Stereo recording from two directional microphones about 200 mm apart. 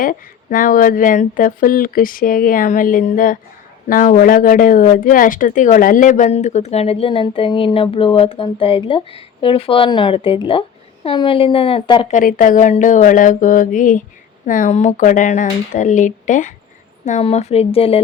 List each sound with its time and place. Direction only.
0.0 s speech: 45° left (ahead or behind); by 12.1 s 25° left (ahead or behind)
12.1 s speech: 40° left (ahead or behind)